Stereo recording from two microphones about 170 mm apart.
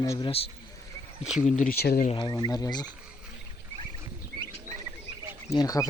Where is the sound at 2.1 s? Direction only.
25° left (ahead or behind).